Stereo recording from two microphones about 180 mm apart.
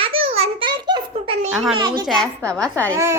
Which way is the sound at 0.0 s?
30° right (ahead or behind).